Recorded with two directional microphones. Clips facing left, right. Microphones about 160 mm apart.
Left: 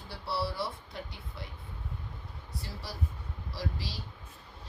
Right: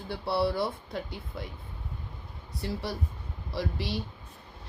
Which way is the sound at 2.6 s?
65° right (ahead or behind).